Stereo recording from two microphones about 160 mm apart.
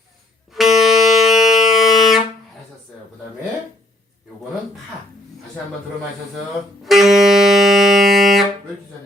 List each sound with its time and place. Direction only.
0.5 s music: centre (ahead or behind)
6.8 s music: centre (ahead or behind)